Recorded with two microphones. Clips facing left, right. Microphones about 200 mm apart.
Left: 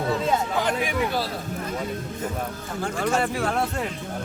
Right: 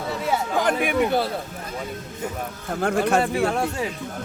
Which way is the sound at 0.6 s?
55° right (ahead or behind).